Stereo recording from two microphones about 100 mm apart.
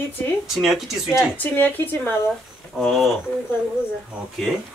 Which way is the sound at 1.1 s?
20° left (ahead or behind).